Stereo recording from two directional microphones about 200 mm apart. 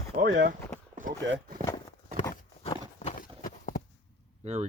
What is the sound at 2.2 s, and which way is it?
Horse, 20° left (ahead or behind).